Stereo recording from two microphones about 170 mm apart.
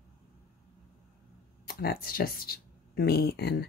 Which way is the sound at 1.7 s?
60° left (ahead or behind).